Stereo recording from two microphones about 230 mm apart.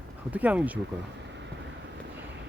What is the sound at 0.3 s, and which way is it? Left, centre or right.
Speech, centre.